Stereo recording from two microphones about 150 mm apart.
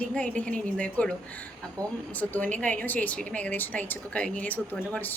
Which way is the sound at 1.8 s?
20° right (ahead or behind).